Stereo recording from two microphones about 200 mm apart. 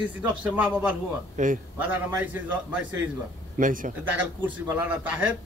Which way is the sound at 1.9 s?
10° right (ahead or behind).